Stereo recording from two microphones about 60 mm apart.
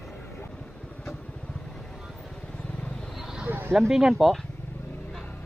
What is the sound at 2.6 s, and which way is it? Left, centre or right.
Vehicle, centre.